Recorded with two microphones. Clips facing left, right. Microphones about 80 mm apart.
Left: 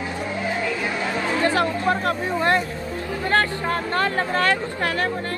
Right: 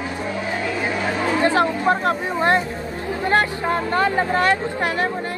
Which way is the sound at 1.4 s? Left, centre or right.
Right.